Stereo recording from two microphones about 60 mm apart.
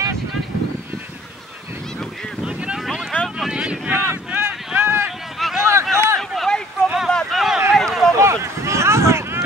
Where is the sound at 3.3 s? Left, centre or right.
Centre.